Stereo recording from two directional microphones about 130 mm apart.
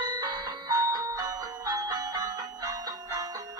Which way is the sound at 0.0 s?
30° right (ahead or behind).